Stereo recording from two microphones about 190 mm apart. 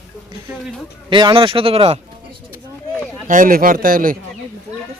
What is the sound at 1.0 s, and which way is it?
Speech, 25° right (ahead or behind).